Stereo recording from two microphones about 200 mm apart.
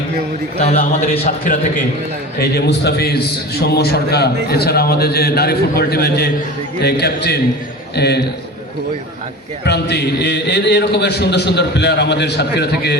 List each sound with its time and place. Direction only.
0.8 s a man's voice: 50° left (ahead or behind)
2.4 s a man's voice: 55° left (ahead or behind)
9.6 s a man's voice: 55° left (ahead or behind)